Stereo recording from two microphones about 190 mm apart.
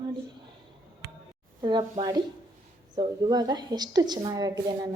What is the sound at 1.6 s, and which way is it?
A woman's voice, 25° right (ahead or behind).